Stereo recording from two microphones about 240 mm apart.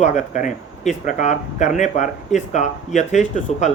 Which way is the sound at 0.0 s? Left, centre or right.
Left.